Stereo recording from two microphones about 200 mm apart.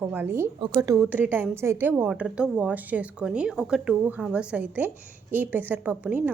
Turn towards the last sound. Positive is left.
turn(degrees=-10)  # may be behind; listen again after turning